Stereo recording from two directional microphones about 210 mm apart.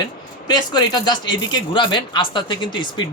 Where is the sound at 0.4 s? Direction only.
20° left (ahead or behind).